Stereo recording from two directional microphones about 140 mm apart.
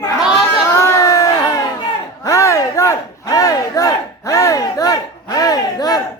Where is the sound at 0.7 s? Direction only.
20° left (ahead or behind).